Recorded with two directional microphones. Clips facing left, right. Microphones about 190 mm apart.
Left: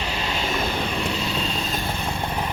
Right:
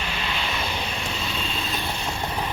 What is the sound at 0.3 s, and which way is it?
Vehicle, 45° left (ahead or behind).